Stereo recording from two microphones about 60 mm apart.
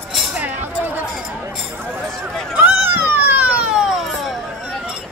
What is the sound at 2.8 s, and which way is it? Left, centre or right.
Vehicle, right.